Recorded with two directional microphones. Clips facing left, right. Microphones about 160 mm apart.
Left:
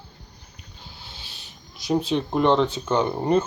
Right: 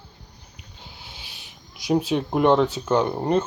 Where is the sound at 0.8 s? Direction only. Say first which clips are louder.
Even; 15° right (ahead or behind).